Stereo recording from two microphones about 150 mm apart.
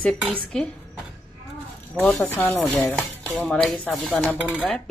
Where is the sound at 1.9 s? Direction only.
10° left (ahead or behind).